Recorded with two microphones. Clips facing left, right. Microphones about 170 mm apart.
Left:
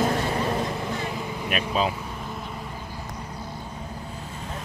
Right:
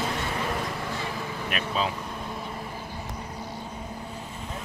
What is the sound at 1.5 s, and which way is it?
Vehicle, 15° left (ahead or behind).